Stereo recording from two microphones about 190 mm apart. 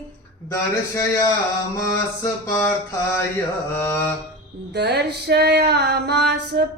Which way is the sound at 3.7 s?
10° left (ahead or behind).